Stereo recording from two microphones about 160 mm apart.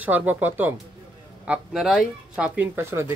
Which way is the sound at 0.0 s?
10° right (ahead or behind).